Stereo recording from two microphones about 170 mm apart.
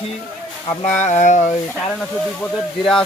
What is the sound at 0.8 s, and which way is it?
Speech, 45° left (ahead or behind).